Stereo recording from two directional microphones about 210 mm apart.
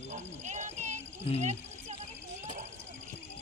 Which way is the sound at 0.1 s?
35° right (ahead or behind).